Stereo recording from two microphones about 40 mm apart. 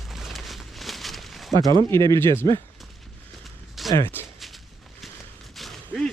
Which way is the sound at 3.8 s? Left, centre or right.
Centre.